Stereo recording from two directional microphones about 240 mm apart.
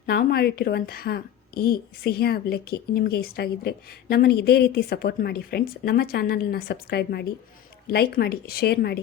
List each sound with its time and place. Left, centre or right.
0.0 s a woman's voice: left